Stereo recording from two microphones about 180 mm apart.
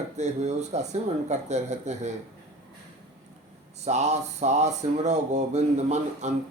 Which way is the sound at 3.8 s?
40° right (ahead or behind).